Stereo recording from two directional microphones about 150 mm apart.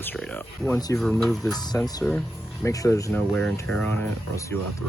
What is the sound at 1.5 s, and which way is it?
Speech, 25° left (ahead or behind).